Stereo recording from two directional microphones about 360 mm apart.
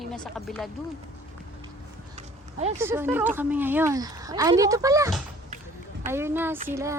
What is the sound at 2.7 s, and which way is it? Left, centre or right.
Speech, centre.